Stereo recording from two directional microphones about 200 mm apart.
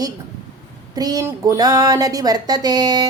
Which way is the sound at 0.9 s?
20° right (ahead or behind).